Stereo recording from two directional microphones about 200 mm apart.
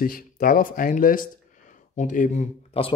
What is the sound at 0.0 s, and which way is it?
Speech, 45° left (ahead or behind).